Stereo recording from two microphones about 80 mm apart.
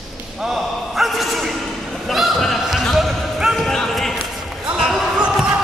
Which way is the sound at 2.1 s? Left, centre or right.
Centre.